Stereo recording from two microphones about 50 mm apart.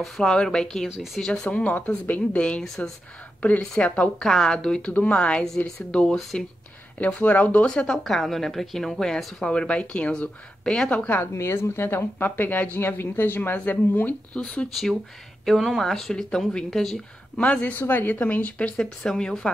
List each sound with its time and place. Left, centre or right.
0.0 s a woman's voice: centre
1.6 s speech: left
3.8 s speech: left
4.2 s a woman's voice: centre
7.2 s speech: left
7.6 s a woman's voice: centre
8.0 s a woman's voice: centre
11.3 s speech: left
12.3 s speech: left
14.4 s a woman's voice: centre
14.7 s a woman's voice: centre
17.4 s speech: left
17.7 s speech: left
18.8 s a woman's voice: centre